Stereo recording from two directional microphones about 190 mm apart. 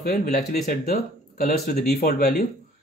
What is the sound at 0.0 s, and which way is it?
Speech, 50° left (ahead or behind).